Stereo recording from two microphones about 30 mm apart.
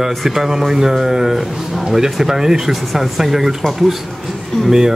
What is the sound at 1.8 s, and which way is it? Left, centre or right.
A man's voice, centre.